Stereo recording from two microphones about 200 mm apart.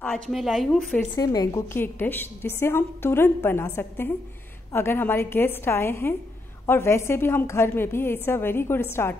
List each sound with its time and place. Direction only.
0.0 s a woman's voice: 5° left (ahead or behind)
1.1 s a woman's voice: 20° left (ahead or behind)